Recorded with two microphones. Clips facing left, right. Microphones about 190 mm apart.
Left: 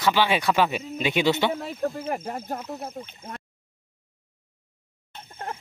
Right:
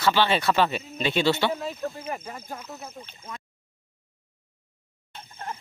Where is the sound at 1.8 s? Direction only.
45° left (ahead or behind).